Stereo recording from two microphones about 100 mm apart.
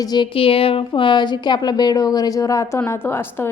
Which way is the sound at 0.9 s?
50° left (ahead or behind).